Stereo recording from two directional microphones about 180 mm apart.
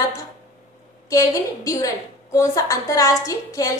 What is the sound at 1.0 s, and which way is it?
A woman's voice, 20° left (ahead or behind).